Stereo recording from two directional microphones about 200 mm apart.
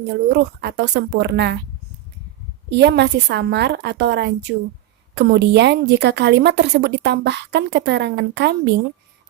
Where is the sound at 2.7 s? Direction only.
60° right (ahead or behind).